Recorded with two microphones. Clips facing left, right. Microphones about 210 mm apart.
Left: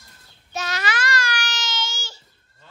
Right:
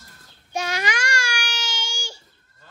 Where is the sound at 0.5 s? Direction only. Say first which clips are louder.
Right 1 dB; 10° right (ahead or behind).